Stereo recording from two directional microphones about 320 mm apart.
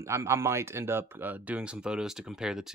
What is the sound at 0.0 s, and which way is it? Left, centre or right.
Speech, centre.